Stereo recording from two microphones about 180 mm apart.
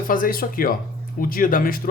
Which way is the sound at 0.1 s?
50° left (ahead or behind).